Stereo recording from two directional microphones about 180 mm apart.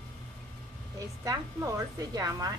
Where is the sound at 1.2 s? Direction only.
20° right (ahead or behind).